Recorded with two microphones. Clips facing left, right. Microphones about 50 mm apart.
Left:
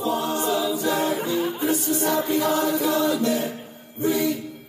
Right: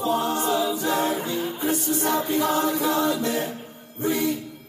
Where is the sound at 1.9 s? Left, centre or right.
Right.